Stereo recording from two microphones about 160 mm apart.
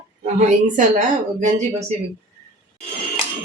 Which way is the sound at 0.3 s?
50° right (ahead or behind).